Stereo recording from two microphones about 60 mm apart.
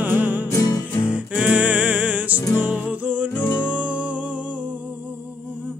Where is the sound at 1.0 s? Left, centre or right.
Right.